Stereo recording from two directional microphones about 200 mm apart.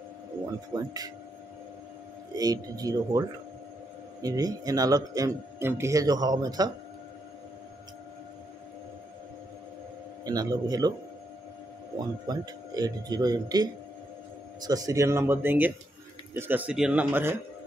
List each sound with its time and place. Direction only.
0.7 s speech: 20° right (ahead or behind)
2.3 s speech: 20° right (ahead or behind)
10.2 s speech: 20° right (ahead or behind)
12.0 s speech: 20° right (ahead or behind)